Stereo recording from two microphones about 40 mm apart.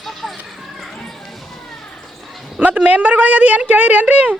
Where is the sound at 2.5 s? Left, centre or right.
Right.